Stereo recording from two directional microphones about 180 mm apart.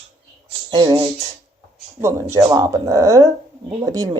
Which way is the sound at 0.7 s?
25° right (ahead or behind).